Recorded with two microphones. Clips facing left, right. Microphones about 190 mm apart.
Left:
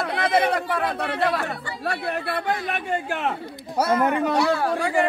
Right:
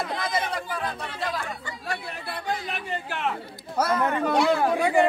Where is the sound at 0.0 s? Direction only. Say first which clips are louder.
Left 7 dB; 65° left (ahead or behind); by 3.3 s 50° left (ahead or behind).